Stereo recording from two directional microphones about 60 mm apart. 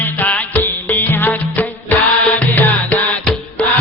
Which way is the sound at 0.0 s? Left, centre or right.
Left.